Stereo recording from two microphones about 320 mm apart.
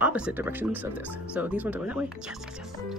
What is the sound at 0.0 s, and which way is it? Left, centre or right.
Speech, centre.